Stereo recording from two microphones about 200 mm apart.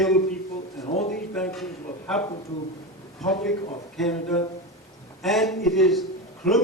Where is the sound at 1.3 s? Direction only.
5° left (ahead or behind).